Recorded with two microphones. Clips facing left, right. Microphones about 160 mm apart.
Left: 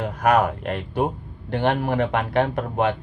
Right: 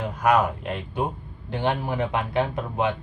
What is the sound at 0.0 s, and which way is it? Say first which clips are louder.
Speech: left 2 dB; 60° left (ahead or behind).